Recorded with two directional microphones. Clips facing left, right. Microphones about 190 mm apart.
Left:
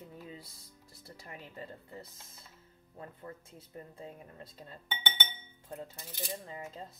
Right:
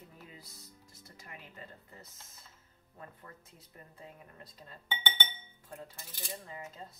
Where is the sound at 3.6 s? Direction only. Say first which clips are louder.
Left 7 dB; 25° left (ahead or behind).